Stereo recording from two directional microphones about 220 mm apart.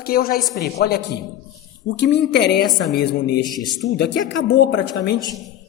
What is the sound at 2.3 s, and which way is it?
A woman's voice, 50° left (ahead or behind).